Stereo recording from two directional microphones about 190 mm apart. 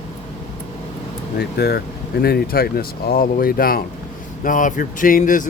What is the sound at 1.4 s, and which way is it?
Speech, 55° left (ahead or behind).